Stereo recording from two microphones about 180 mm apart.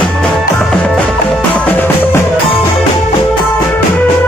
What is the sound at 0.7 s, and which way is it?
Music, centre (ahead or behind).